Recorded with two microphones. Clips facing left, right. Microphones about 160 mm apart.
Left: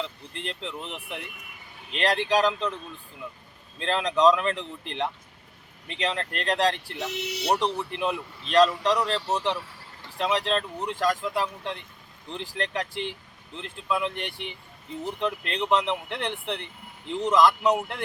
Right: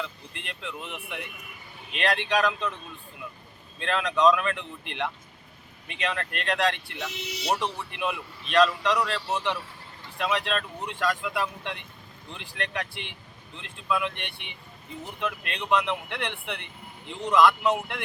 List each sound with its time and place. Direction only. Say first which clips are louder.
0.0 s speech: left 3 dB; 30° left (ahead or behind)
3.8 s speech: left 1 dB; 30° left (ahead or behind)
7.1 s speech: left 4 dB; 65° left (ahead or behind)
7.8 s speech: left 3 dB; 35° left (ahead or behind)